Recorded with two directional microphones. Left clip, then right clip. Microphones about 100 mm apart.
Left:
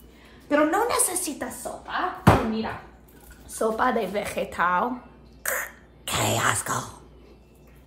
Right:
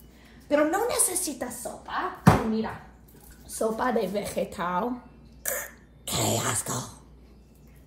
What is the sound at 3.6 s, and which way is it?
A woman's voice, 15° left (ahead or behind).